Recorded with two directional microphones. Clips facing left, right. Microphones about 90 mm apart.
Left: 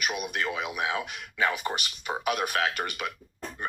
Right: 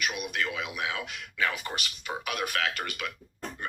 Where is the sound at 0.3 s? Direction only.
30° left (ahead or behind).